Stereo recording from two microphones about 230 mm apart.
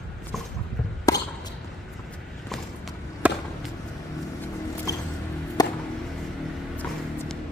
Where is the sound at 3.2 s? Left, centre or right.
Centre.